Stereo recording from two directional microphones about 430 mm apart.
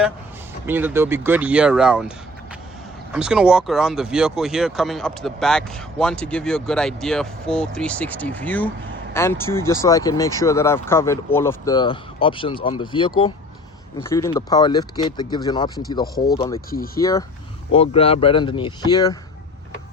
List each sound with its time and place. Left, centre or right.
0.7 s speech: centre
16.2 s speech: left
17.0 s speech: centre